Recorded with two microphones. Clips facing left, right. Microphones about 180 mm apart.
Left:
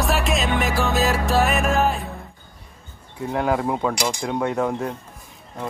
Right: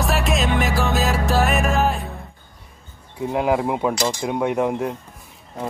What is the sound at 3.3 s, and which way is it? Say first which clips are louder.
Speech: right 2 dB; 15° right (ahead or behind).